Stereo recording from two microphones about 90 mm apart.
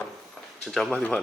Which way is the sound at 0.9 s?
10° left (ahead or behind).